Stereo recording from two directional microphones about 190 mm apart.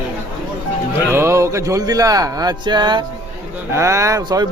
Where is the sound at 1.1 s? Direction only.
15° right (ahead or behind).